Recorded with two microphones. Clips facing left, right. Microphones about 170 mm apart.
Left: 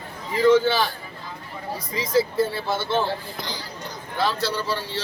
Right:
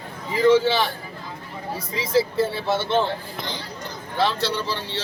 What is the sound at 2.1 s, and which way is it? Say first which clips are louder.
Speech: even; 25° right (ahead or behind).